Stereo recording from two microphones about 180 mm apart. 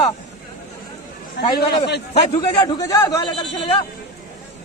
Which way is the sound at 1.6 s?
65° left (ahead or behind).